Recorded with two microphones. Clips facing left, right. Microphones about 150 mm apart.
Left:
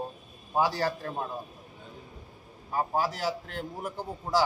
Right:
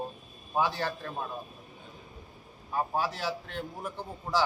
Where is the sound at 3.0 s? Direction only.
40° left (ahead or behind).